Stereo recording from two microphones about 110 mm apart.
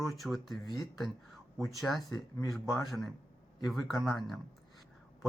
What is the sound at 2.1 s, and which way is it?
Speech, 35° left (ahead or behind).